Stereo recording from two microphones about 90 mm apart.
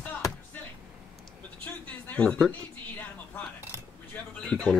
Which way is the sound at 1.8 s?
15° left (ahead or behind).